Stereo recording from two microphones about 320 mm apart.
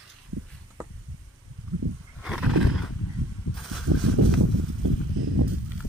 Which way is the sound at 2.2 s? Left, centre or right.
Centre.